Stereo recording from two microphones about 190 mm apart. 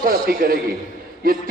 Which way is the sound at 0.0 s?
50° right (ahead or behind).